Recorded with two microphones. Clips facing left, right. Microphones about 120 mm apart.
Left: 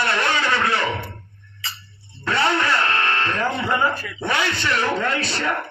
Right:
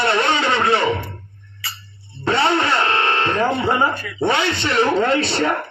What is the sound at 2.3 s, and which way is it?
A man's voice, 25° right (ahead or behind).